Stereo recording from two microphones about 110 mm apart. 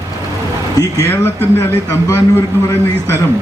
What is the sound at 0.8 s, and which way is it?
Speech, 35° left (ahead or behind).